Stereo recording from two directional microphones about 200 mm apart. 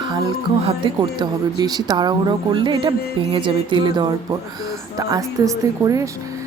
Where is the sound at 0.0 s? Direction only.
20° right (ahead or behind).